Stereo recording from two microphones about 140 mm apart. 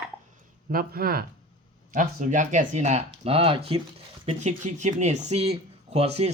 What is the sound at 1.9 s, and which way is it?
Speech, 65° right (ahead or behind).